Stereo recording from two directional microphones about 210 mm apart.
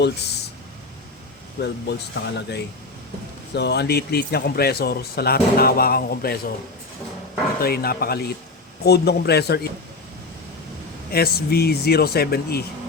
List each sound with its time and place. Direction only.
0.0 s a sound: 55° left (ahead or behind)
1.6 s speech: 55° left (ahead or behind)
7.6 s speech: 45° left (ahead or behind)
11.1 s speech: 45° left (ahead or behind)